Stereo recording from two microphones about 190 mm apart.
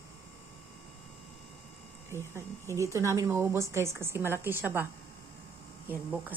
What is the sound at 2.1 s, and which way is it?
Speech, 15° right (ahead or behind).